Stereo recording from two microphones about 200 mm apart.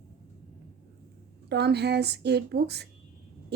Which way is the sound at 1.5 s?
55° right (ahead or behind).